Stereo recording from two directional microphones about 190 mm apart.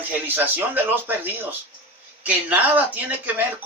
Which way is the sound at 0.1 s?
10° right (ahead or behind).